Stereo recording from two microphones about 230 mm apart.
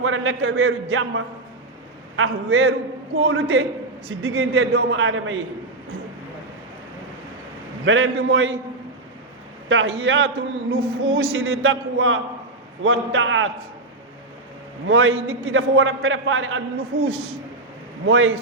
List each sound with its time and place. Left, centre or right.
0.0 s a man's voice: right
7.9 s a man's voice: right
9.6 s a man's voice: right
14.8 s a man's voice: right
16.9 s speech: right
18.1 s a man's voice: right